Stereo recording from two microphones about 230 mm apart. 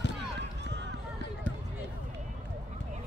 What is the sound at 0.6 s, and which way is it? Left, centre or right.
Run, right.